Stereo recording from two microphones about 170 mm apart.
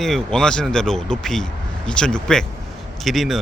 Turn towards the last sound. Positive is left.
turn(degrees=0)  # may be behind; listen again after turning